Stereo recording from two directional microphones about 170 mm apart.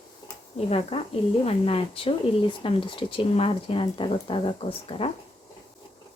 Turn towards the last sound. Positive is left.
turn(degrees=30)  # may be behind; listen again after turning